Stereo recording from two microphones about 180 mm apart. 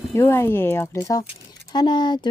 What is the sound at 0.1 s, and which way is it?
Speech, 15° left (ahead or behind).